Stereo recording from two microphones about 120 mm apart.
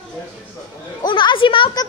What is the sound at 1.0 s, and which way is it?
Speech, 40° left (ahead or behind).